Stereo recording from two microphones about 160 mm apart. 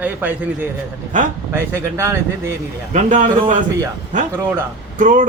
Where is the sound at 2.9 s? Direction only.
50° right (ahead or behind).